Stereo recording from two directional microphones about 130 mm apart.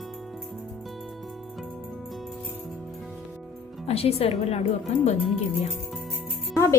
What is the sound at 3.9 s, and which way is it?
Speech, 50° left (ahead or behind).